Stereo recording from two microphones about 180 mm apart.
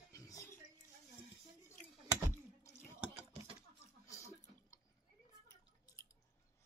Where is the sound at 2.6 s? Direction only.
15° left (ahead or behind).